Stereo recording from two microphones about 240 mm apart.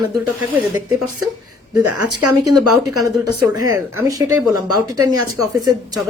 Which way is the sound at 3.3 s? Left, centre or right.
Right.